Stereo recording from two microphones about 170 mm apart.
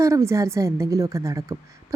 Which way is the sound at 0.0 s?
15° right (ahead or behind).